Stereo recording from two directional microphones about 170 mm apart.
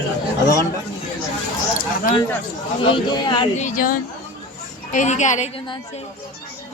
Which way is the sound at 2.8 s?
30° left (ahead or behind).